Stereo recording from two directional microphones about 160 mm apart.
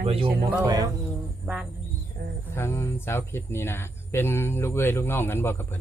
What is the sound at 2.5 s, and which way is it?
Speech, 15° left (ahead or behind).